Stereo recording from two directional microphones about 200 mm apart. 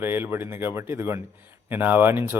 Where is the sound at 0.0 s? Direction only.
10° right (ahead or behind).